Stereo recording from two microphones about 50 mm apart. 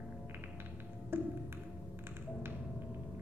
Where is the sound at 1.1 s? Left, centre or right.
Right.